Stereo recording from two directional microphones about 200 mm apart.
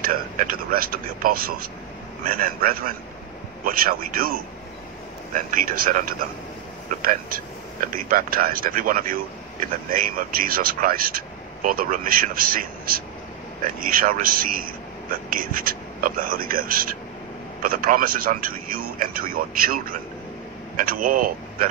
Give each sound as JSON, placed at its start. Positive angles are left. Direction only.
{"t": 0.1, "sound": "speech", "side_deg": -45}